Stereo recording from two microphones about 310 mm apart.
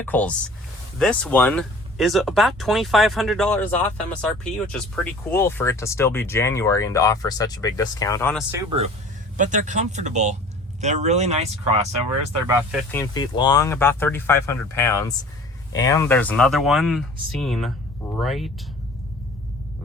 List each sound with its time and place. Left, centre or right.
0.0 s speech: centre
8.4 s speech: centre
12.9 s speech: centre